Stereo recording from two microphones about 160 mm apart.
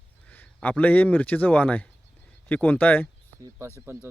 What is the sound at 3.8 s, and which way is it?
Speech, 15° right (ahead or behind).